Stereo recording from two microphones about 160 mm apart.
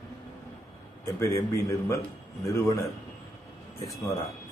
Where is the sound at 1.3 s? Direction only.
20° left (ahead or behind).